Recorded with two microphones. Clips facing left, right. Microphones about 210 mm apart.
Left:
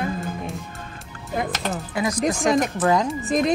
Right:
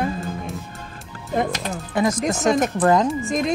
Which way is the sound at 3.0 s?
Centre (ahead or behind).